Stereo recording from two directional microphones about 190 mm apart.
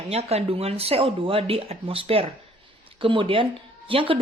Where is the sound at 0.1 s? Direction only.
30° right (ahead or behind).